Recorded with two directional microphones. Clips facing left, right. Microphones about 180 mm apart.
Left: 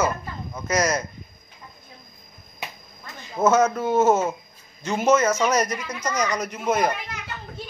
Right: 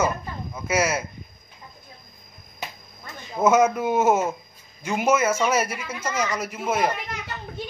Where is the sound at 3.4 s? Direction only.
15° right (ahead or behind).